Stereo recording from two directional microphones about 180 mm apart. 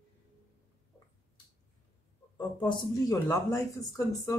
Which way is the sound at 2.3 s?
25° left (ahead or behind).